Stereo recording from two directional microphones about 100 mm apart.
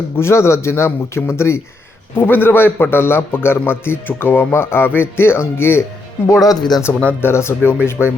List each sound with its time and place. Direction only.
0.2 s a man's voice: 25° left (ahead or behind)
6.4 s speech: 40° left (ahead or behind)
7.1 s a man's voice: 25° left (ahead or behind)